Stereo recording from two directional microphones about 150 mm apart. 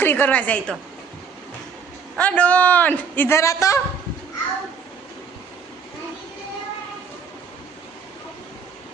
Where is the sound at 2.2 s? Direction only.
10° left (ahead or behind).